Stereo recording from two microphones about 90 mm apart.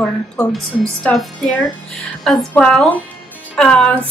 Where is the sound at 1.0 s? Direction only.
15° left (ahead or behind).